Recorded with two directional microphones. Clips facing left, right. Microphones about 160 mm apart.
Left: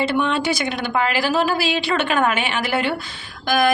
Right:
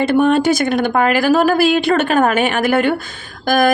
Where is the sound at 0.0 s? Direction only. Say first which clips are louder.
Right 7 dB; 50° right (ahead or behind).